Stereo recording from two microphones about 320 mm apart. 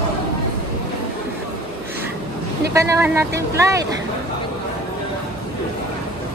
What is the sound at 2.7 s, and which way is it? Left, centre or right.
Speech, centre.